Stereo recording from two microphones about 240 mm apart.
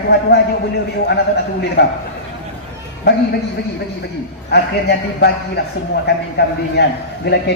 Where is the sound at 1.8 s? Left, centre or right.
Left.